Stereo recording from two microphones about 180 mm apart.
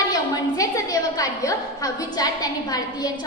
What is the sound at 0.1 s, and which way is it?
A woman's voice, 20° left (ahead or behind).